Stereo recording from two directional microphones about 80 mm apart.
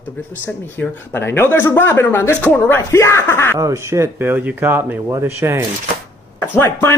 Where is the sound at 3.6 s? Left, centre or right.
Right.